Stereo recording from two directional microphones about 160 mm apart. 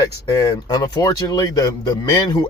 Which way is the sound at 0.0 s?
20° left (ahead or behind).